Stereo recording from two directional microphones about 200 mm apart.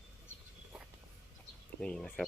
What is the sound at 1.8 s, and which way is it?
Speech, 5° left (ahead or behind).